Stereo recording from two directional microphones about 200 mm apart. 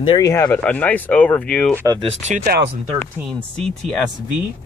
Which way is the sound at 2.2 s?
40° right (ahead or behind).